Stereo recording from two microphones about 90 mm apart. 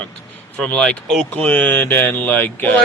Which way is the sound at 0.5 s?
10° left (ahead or behind).